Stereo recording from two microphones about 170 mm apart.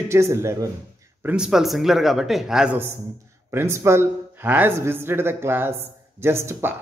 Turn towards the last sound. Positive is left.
turn(degrees=-15)  # may be behind; listen again after turning